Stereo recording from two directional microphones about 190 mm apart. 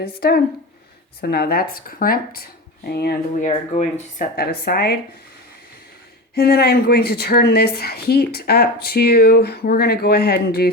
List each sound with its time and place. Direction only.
0.2 s a woman's voice: 55° left (ahead or behind)
3.4 s speech: 40° left (ahead or behind)
6.3 s a woman's voice: 55° left (ahead or behind)